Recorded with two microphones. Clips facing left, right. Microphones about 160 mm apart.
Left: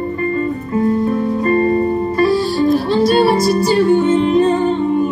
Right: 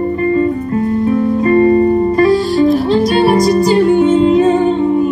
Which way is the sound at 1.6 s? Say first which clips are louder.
Right 5 dB; 45° right (ahead or behind).